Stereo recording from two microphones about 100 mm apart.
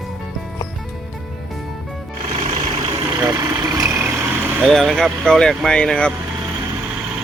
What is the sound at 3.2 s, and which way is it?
Vehicle, 30° right (ahead or behind).